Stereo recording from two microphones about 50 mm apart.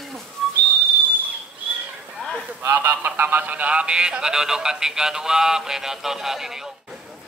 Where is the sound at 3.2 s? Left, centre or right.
Right; by 6.6 s centre.